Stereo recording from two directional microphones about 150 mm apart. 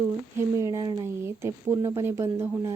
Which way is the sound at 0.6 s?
25° right (ahead or behind).